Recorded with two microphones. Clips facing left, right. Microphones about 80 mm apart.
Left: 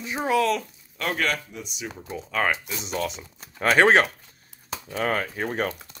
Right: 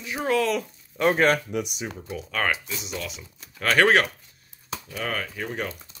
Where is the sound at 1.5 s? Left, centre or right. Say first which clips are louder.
Right 10 dB; right.